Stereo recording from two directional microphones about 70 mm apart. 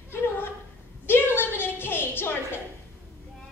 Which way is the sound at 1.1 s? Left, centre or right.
Left.